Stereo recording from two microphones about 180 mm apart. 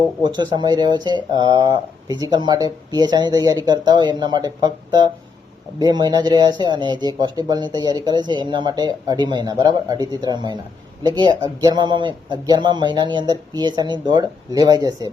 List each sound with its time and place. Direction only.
0.2 s speech: 25° right (ahead or behind)